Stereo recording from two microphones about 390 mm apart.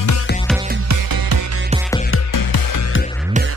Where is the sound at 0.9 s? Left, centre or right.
Right.